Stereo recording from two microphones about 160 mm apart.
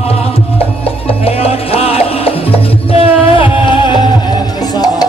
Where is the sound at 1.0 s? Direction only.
35° left (ahead or behind).